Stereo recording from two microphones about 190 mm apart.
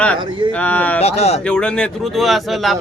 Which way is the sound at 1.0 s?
35° left (ahead or behind).